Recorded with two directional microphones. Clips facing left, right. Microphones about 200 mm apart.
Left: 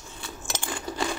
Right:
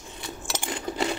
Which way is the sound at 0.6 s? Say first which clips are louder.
Right 2 dB; 20° right (ahead or behind).